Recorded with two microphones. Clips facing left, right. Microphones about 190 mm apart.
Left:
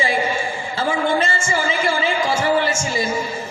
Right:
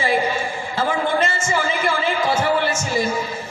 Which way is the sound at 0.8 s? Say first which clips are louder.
Even; 60° right (ahead or behind).